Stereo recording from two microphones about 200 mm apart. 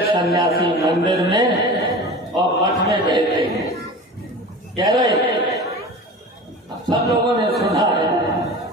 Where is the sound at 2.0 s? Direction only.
20° right (ahead or behind).